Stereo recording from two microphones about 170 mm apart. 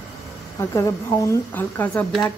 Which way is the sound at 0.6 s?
15° left (ahead or behind).